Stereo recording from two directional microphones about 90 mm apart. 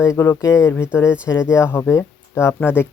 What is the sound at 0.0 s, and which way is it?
Speech, 35° left (ahead or behind).